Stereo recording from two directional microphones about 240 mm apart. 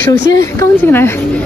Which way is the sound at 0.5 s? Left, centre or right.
Centre.